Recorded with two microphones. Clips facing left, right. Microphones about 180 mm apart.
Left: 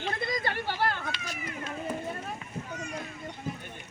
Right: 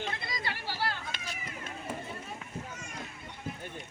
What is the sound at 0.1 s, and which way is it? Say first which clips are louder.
Chatter: left 7 dB; 50° left (ahead or behind).